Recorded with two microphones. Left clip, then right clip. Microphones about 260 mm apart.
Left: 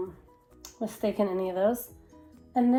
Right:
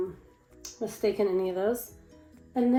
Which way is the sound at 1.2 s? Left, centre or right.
Left.